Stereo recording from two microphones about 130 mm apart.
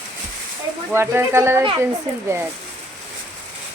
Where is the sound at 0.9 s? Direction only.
20° right (ahead or behind).